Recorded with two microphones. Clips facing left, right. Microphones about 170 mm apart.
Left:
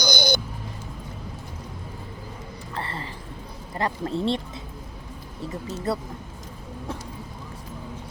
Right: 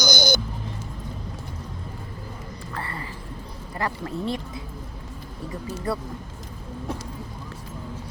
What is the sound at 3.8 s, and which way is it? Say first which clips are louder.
Speech: left 3 dB; 25° left (ahead or behind).